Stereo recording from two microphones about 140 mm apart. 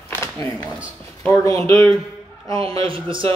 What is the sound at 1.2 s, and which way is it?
Speech, 20° left (ahead or behind).